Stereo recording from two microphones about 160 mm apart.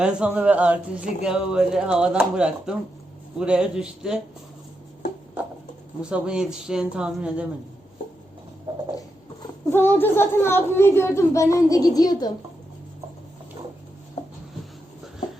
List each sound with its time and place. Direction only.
0.0 s speech: 5° right (ahead or behind)
6.0 s speech: 5° right (ahead or behind)
9.7 s a child's voice: 15° left (ahead or behind)